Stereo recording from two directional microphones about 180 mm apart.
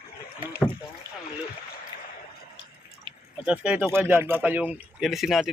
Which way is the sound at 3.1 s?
25° right (ahead or behind).